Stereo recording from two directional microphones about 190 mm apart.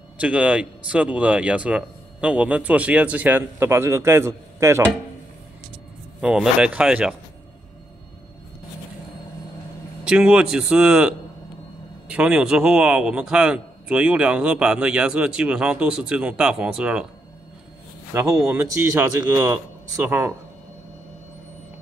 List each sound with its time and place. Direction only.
0.2 s speech: 5° right (ahead or behind)
6.2 s a man's voice: 5° right (ahead or behind)
10.0 s a man's voice: 5° right (ahead or behind)
18.1 s speech: 15° right (ahead or behind)